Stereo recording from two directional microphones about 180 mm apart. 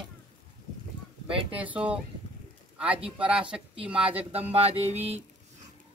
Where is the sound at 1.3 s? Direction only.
30° right (ahead or behind).